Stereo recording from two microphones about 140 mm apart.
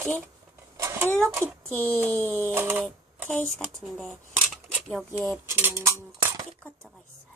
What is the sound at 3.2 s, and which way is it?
Speech, 10° left (ahead or behind).